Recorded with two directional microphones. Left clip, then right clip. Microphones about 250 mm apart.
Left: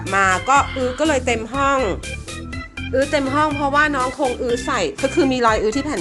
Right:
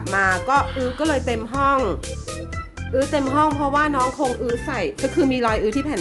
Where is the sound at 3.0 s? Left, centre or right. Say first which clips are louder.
Left 1 dB; centre.